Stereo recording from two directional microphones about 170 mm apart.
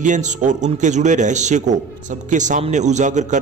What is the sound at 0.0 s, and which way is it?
A man's voice, 45° right (ahead or behind).